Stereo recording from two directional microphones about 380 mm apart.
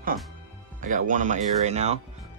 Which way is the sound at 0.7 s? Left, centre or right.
Centre.